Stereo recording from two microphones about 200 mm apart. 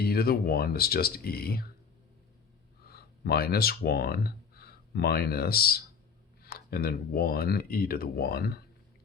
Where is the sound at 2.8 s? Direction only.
50° left (ahead or behind).